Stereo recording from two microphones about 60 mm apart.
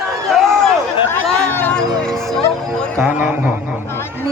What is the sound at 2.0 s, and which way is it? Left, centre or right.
Music, centre.